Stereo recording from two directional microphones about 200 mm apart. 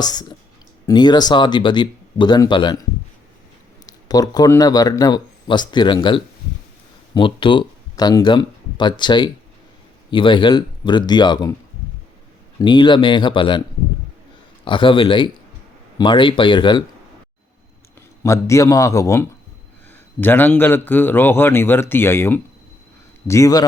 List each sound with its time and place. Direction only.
0.0 s speech: 20° left (ahead or behind)
3.8 s speech: 20° left (ahead or behind)
12.5 s speech: 25° left (ahead or behind)
14.6 s speech: 25° left (ahead or behind)
18.2 s a man's voice: 15° left (ahead or behind)